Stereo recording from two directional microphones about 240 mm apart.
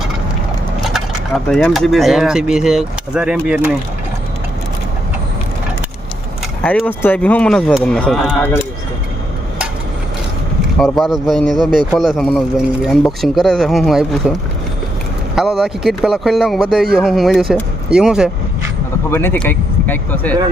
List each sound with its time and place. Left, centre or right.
0.9 s speech: centre
6.6 s speech: centre
10.8 s speech: centre
15.4 s speech: centre
19.1 s speech: centre